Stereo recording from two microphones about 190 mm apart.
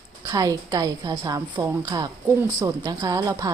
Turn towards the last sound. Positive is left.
turn(degrees=-20)  # may be behind; listen again after turning